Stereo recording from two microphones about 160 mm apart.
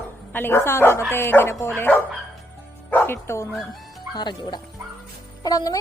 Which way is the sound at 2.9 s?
10° left (ahead or behind).